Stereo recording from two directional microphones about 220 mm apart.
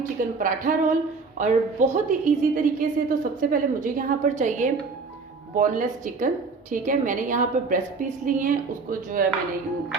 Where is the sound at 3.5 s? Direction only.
35° right (ahead or behind).